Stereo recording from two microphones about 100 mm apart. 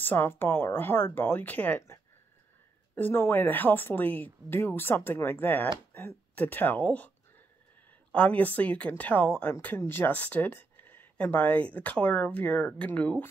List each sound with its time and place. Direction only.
0.0 s speech: 20° left (ahead or behind)
3.0 s speech: 20° left (ahead or behind)
8.1 s speech: 15° left (ahead or behind)
10.8 s a sound: 15° left (ahead or behind)
11.7 s speech: 15° left (ahead or behind)